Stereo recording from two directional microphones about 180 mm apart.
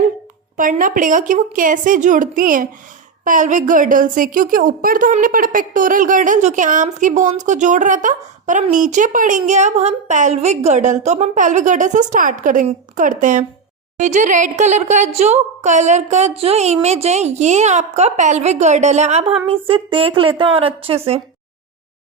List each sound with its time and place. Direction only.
0.5 s a woman's voice: 50° right (ahead or behind); by 21.2 s 35° right (ahead or behind)